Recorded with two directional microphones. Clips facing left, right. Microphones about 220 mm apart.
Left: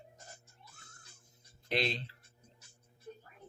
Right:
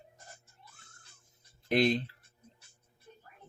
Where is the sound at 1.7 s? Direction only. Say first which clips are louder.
Right 8 dB; 50° right (ahead or behind).